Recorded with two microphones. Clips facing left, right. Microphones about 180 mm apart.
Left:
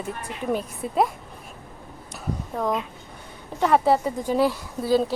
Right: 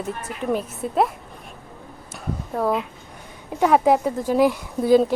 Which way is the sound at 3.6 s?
10° right (ahead or behind).